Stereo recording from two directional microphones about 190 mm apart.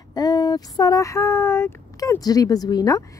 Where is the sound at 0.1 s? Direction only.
20° left (ahead or behind).